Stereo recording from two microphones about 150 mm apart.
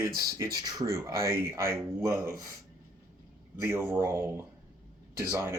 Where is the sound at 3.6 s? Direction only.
15° right (ahead or behind).